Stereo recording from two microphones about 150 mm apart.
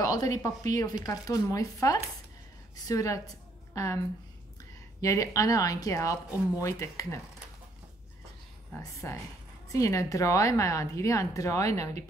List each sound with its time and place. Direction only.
0.0 s a woman's voice: 25° left (ahead or behind)
5.0 s a woman's voice: 20° left (ahead or behind)
8.7 s a woman's voice: 15° left (ahead or behind)